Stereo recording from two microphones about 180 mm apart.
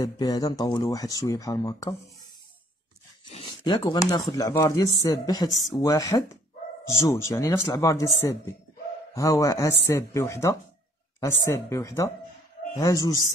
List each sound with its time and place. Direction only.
0.0 s speech: 20° left (ahead or behind)
3.3 s a sound: 25° left (ahead or behind)
4.3 s speech: 15° left (ahead or behind)